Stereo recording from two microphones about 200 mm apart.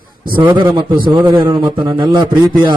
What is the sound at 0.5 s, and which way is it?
A man's voice, 20° right (ahead or behind).